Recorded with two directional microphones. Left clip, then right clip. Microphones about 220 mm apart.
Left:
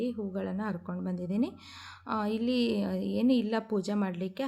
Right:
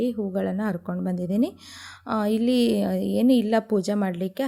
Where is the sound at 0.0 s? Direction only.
30° right (ahead or behind).